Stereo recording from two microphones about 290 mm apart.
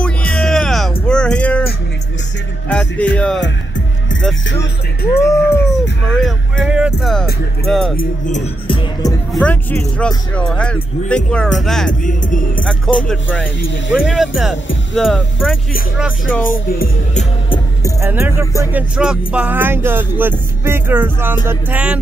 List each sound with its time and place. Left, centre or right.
0.0 s music: centre
2.7 s speech: centre
3.3 s music: left
5.2 s speech: centre
8.0 s speech: left
9.3 s speech: centre
11.9 s speech: left
13.1 s speech: centre
16.4 s music: left
18.0 s music: centre
21.5 s speech: centre